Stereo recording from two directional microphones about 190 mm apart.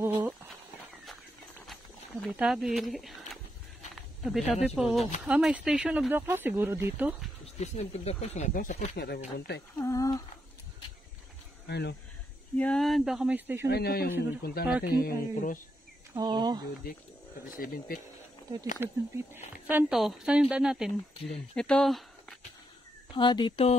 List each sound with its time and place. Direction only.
0.0 s horse: 10° right (ahead or behind)
2.2 s a woman's voice: 5° right (ahead or behind)
7.5 s speech: 35° left (ahead or behind)
8.9 s speech: 55° left (ahead or behind)
9.8 s speech: 15° left (ahead or behind)
11.6 s speech: 60° left (ahead or behind)
12.5 s a woman's voice: 5° left (ahead or behind)
13.7 s speech: 55° left (ahead or behind)
16.2 s speech: 20° right (ahead or behind)
17.5 s speech: 50° left (ahead or behind)
18.8 s a woman's voice: 10° right (ahead or behind)
23.1 s speech: 25° left (ahead or behind)